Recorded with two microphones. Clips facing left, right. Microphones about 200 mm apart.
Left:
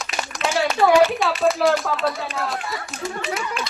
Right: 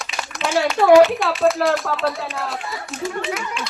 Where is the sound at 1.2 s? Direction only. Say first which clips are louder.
Right 1 dB; centre (ahead or behind).